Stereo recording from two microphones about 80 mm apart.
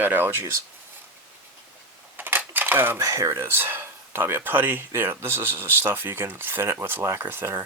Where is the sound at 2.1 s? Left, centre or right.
Right.